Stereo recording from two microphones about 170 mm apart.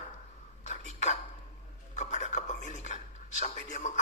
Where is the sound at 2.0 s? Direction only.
45° left (ahead or behind).